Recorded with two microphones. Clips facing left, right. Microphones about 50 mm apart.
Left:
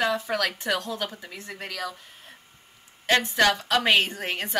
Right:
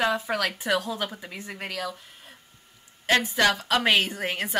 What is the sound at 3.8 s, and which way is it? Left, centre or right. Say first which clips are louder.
Speech: even; centre.